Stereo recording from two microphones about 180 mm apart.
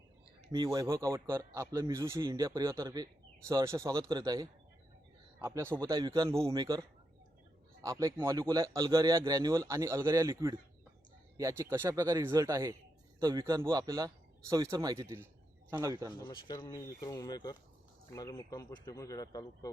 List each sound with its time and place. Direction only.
0.5 s speech: 20° right (ahead or behind)
16.1 s speech: 25° left (ahead or behind)